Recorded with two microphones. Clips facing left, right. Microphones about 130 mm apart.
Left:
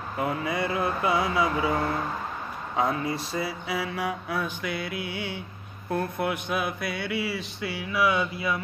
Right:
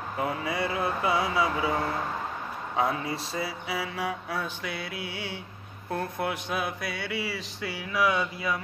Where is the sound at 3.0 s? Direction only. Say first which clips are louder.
Left 3 dB; 30° right (ahead or behind).